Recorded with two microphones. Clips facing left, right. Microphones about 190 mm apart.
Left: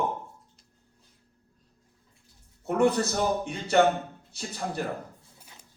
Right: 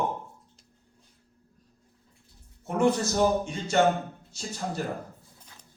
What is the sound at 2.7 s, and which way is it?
A man's voice, 60° left (ahead or behind).